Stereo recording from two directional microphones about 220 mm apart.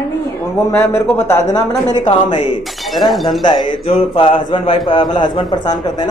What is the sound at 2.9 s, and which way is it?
Speech, centre (ahead or behind).